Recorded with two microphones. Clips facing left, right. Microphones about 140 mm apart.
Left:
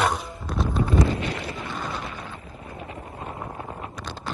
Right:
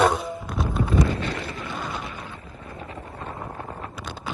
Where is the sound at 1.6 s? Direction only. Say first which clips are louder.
Even; centre (ahead or behind).